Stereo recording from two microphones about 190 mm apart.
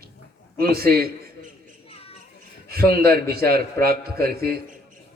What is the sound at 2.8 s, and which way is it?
A man's voice, 55° right (ahead or behind).